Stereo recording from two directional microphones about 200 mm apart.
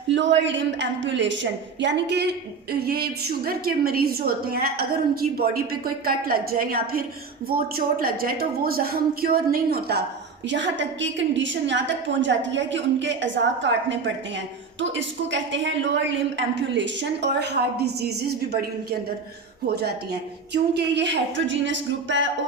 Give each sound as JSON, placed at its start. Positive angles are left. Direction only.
{"t": 0.1, "sound": "a woman's voice", "side_deg": -65}
{"t": 10.5, "sound": "a woman's voice", "side_deg": -65}
{"t": 19.6, "sound": "a woman's voice", "side_deg": -55}